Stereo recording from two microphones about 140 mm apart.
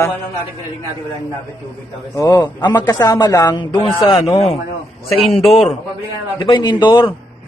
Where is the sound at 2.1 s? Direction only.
25° left (ahead or behind).